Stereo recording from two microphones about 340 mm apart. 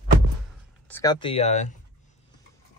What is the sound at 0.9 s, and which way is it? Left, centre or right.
Speech, centre.